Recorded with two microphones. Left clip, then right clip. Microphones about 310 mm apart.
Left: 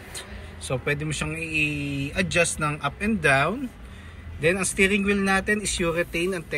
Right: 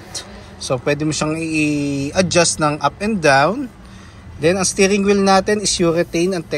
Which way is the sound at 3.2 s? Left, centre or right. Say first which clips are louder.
Right 8 dB; centre.